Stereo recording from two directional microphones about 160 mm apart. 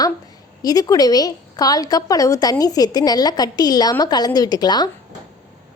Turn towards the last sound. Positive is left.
turn(degrees=25)  # may be behind; listen again after turning